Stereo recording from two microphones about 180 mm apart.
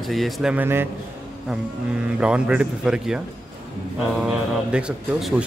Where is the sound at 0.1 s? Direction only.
Centre (ahead or behind).